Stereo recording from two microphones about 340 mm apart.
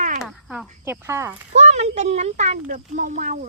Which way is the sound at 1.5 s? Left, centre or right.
Centre.